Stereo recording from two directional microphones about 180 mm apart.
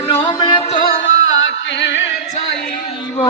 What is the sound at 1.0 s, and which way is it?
Music, 90° left.